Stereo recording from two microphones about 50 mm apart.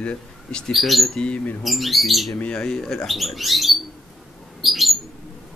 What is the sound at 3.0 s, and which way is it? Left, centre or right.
Speech, centre.